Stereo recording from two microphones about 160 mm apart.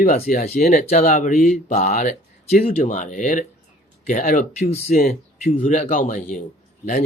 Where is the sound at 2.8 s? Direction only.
55° left (ahead or behind).